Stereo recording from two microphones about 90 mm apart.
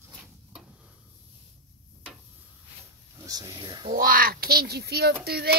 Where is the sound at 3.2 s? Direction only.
45° right (ahead or behind).